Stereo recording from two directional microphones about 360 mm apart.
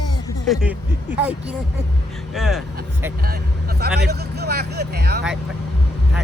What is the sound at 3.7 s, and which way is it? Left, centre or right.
Speech, right.